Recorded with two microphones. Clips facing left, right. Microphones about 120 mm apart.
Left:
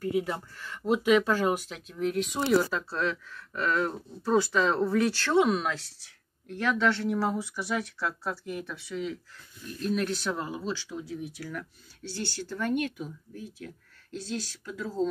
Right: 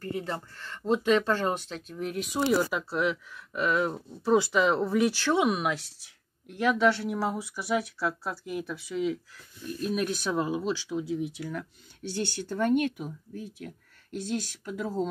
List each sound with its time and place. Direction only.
0.0 s speech: 5° left (ahead or behind)
2.7 s speech: 15° right (ahead or behind)
14.1 s speech: 15° right (ahead or behind)